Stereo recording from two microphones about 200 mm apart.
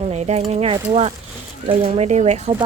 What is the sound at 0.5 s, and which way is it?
Speech, 30° right (ahead or behind).